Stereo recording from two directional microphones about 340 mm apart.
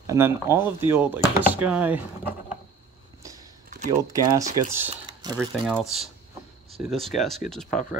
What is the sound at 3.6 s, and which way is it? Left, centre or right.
Typing, right.